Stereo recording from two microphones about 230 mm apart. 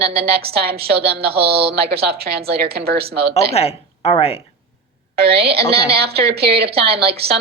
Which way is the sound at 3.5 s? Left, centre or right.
Left.